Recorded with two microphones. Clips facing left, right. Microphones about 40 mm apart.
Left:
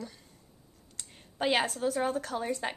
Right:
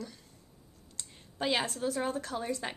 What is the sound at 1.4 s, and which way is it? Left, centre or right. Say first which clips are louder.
A woman's voice: left 3 dB; left.